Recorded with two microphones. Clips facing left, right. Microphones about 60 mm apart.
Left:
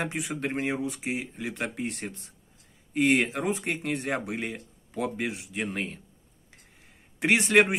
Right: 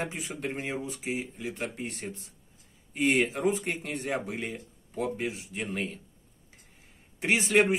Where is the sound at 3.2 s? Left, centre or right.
Left.